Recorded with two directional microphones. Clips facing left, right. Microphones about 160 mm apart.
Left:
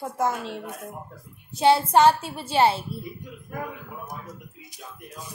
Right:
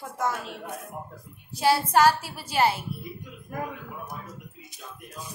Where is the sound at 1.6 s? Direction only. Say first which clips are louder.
Left 3 dB; 25° left (ahead or behind).